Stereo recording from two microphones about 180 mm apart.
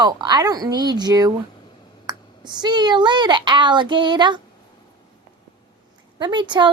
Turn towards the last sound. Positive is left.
turn(degrees=-25)  # may be behind; listen again after turning